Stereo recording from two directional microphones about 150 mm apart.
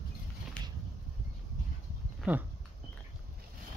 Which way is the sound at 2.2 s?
10° right (ahead or behind).